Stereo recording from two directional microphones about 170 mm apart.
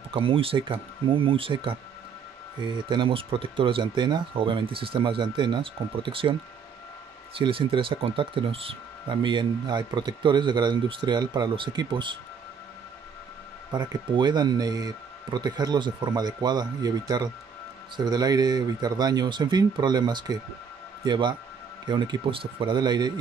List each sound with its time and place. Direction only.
0.1 s speech: 30° right (ahead or behind)
7.3 s speech: 30° right (ahead or behind)
13.7 s speech: 25° right (ahead or behind)